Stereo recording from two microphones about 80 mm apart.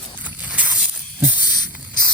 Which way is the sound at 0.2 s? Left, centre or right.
Centre.